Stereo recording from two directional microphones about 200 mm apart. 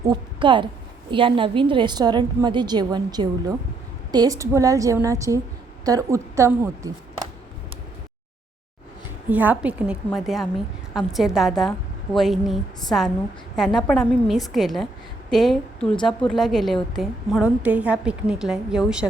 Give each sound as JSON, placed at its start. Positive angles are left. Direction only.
{"t": 0.0, "sound": "a woman's voice", "side_deg": -20}
{"t": 9.3, "sound": "a woman's voice", "side_deg": -10}